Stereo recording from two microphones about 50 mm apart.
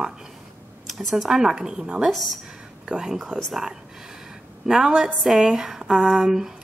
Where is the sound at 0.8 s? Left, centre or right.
Centre.